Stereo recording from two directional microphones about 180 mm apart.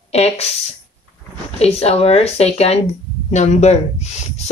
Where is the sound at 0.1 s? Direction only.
35° left (ahead or behind).